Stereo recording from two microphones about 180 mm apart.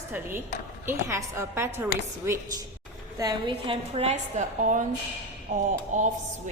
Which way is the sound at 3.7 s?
35° right (ahead or behind).